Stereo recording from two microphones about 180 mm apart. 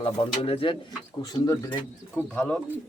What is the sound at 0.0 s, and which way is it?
Speech, 30° left (ahead or behind).